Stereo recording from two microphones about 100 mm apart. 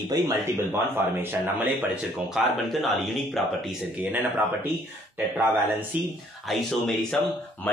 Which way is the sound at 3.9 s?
20° right (ahead or behind).